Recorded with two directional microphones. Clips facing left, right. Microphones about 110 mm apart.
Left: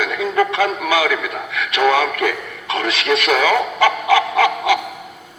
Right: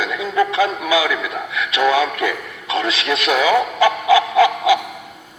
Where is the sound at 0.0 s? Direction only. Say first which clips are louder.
Left 1 dB; 55° left (ahead or behind).